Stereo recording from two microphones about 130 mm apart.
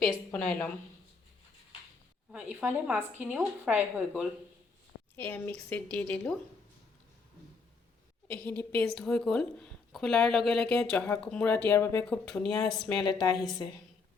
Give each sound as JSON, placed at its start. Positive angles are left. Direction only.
{"t": 0.3, "sound": "a woman's voice", "side_deg": 10}
{"t": 2.3, "sound": "a woman's voice", "side_deg": -15}
{"t": 5.1, "sound": "a woman's voice", "side_deg": 15}
{"t": 8.3, "sound": "a woman's voice", "side_deg": 10}
{"t": 12.0, "sound": "speech", "side_deg": 5}